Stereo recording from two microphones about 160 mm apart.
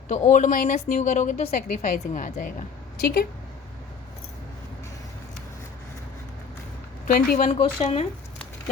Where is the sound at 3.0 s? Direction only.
90° left.